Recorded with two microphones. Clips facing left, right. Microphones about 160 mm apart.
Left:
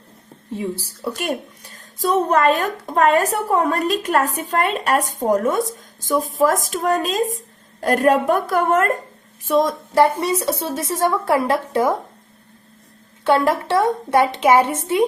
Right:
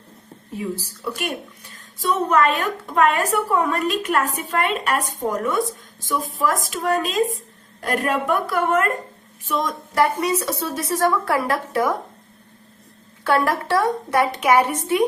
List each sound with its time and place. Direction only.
0.5 s a woman's voice: 30° left (ahead or behind)
13.2 s a woman's voice: 25° left (ahead or behind)